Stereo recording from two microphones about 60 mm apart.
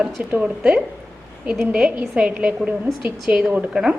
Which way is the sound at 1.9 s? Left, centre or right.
Centre.